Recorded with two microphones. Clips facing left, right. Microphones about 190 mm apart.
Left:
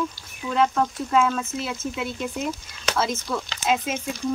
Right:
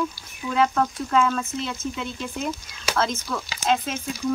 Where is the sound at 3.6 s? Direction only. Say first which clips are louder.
Right 1 dB; 5° left (ahead or behind).